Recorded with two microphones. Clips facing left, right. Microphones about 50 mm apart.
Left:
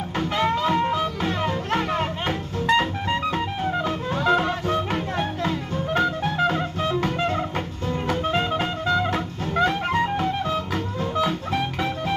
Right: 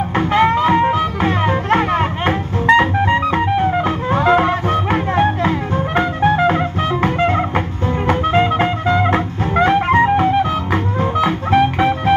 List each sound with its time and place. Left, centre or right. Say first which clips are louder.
0.1 s music: right 8 dB; right